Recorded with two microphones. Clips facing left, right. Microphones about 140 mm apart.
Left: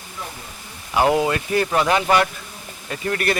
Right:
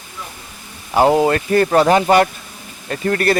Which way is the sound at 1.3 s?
45° right (ahead or behind).